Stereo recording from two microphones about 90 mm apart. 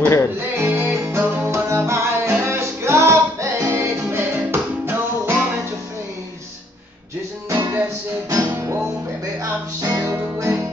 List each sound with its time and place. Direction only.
0.0 s music: 30° left (ahead or behind)
0.6 s music: 20° right (ahead or behind)
7.4 s music: 40° right (ahead or behind)
8.5 s music: 25° right (ahead or behind)
9.4 s music: 40° right (ahead or behind)